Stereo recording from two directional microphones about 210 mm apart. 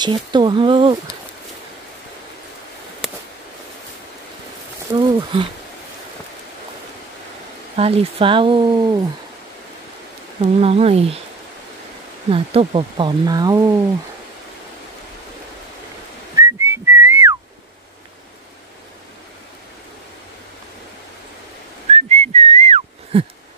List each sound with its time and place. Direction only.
0.0 s speech: 20° right (ahead or behind)
3.0 s a sound: centre (ahead or behind)
5.0 s speech: 20° right (ahead or behind)
7.7 s speech: 30° right (ahead or behind)
10.4 s speech: 30° right (ahead or behind)
12.3 s speech: 25° right (ahead or behind)
16.3 s whistling: 10° right (ahead or behind)
21.9 s whistling: 30° right (ahead or behind)